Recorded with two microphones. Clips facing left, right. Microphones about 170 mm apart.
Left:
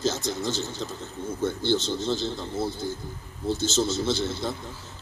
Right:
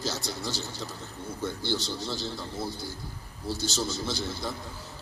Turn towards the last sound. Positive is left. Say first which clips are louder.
# left 6 dB
turn(degrees=25)  # may be behind; listen again after turning